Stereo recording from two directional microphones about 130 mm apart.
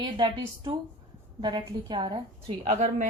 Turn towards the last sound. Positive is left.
turn(degrees=-60)  # may be behind; listen again after turning